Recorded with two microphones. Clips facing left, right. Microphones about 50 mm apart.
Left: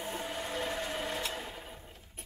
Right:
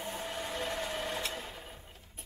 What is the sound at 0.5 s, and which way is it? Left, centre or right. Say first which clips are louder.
Train: left 1 dB; centre.